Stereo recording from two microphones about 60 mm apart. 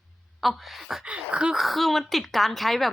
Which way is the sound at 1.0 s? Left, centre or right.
Centre.